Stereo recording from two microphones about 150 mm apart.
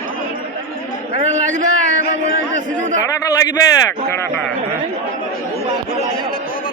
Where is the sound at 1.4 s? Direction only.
55° right (ahead or behind).